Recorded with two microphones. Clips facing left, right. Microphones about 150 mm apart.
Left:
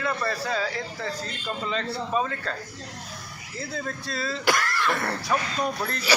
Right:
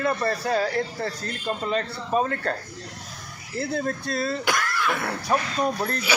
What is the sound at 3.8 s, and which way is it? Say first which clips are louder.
Speech: right 5 dB; 45° right (ahead or behind).